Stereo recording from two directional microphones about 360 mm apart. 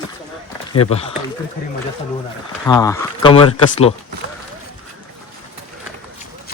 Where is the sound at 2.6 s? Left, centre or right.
Centre.